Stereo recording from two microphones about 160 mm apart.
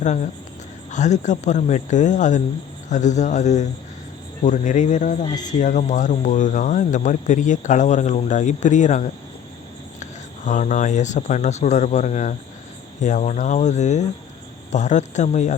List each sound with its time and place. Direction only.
0.0 s speech: 50° left (ahead or behind)
5.2 s speech: 25° left (ahead or behind)
5.5 s speech: 50° left (ahead or behind)